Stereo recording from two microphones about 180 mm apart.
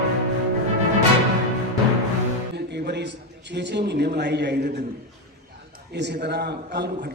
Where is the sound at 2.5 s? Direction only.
70° right (ahead or behind).